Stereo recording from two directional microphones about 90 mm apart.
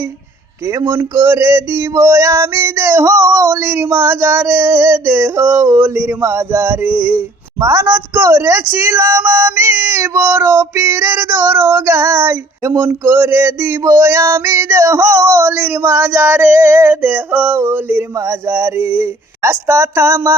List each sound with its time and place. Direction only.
0.7 s speech: 35° right (ahead or behind)
0.9 s male singing: 30° right (ahead or behind)